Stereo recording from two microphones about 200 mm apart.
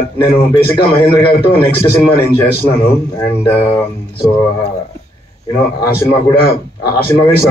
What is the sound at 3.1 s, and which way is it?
Speech, 25° left (ahead or behind).